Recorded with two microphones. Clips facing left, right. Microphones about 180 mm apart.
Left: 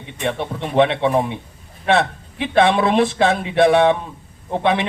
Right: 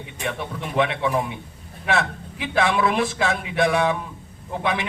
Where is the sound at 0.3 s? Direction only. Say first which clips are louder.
Left 6 dB; 30° left (ahead or behind).